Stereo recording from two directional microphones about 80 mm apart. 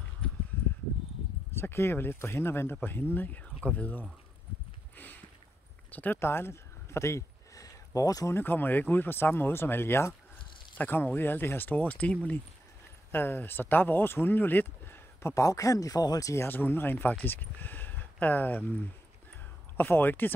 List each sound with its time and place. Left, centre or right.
1.6 s speech: left
4.9 s a sound: left
8.3 s speech: left
15.3 s speech: left
16.4 s speech: left
19.8 s speech: left